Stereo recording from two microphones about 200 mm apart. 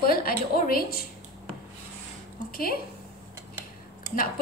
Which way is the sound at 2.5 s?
50° left (ahead or behind).